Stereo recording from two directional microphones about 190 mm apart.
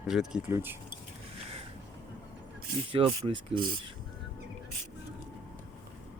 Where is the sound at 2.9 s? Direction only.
30° right (ahead or behind).